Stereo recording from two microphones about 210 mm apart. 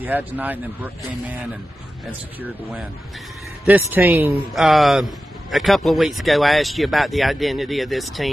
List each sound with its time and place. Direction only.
0.0 s speech: 10° right (ahead or behind)
3.6 s speech: 10° right (ahead or behind)